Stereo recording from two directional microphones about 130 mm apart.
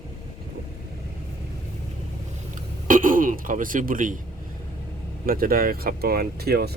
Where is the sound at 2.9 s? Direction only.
90° right.